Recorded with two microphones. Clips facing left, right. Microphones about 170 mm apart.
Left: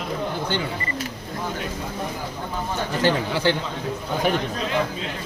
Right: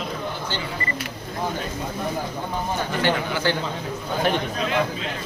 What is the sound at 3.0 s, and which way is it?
Speech, 30° left (ahead or behind).